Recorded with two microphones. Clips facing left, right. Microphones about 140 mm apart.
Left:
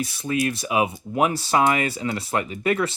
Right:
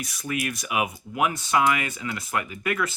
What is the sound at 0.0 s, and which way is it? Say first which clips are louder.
Speech: left 6 dB; 30° left (ahead or behind).